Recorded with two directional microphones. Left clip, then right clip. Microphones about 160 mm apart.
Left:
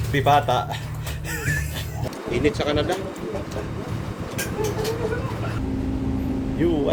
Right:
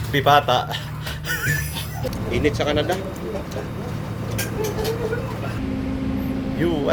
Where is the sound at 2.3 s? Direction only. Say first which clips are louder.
Right 1 dB; 15° left (ahead or behind).